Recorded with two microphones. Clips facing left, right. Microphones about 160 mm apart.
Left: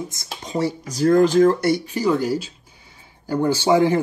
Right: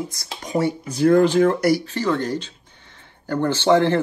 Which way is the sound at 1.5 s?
25° left (ahead or behind).